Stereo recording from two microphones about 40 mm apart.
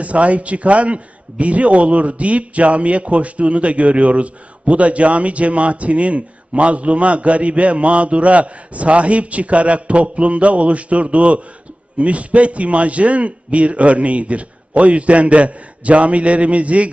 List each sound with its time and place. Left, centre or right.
0.0 s speech: right